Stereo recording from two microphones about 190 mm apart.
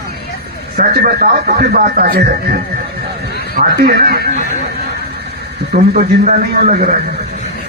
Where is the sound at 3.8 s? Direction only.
55° right (ahead or behind).